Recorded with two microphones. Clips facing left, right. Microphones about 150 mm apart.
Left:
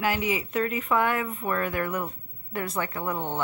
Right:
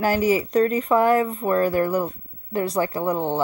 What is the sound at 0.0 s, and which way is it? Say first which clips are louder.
Speech: right 7 dB; 40° right (ahead or behind).